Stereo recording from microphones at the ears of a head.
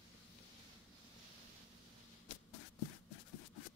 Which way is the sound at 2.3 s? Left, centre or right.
Left.